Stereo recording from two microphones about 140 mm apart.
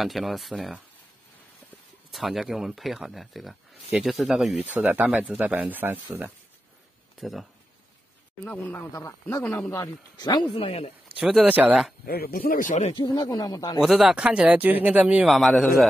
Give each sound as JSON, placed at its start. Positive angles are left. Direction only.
{"t": 0.0, "sound": "speech", "side_deg": 0}
{"t": 2.1, "sound": "speech", "side_deg": 0}
{"t": 4.6, "sound": "speech", "side_deg": -10}
{"t": 7.2, "sound": "speech", "side_deg": 0}
{"t": 8.5, "sound": "speech", "side_deg": 10}
{"t": 10.6, "sound": "speech", "side_deg": 45}
{"t": 11.1, "sound": "speech", "side_deg": -5}
{"t": 12.1, "sound": "speech", "side_deg": 90}
{"t": 12.9, "sound": "speech", "side_deg": 30}
{"t": 13.7, "sound": "speech", "side_deg": -5}